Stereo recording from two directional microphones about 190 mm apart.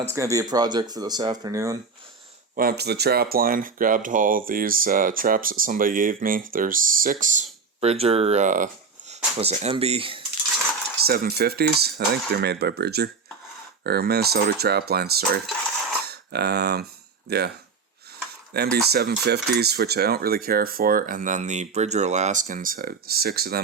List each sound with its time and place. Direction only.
0.1 s speech: 15° right (ahead or behind)
2.6 s speech: 55° right (ahead or behind); by 10.2 s 30° right (ahead or behind)
11.0 s speech: 50° right (ahead or behind)
18.5 s speech: 55° right (ahead or behind)